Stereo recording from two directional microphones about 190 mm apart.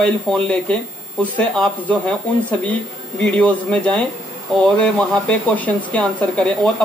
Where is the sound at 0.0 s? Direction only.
5° left (ahead or behind).